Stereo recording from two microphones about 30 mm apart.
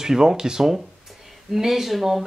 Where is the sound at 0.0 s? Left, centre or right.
Centre.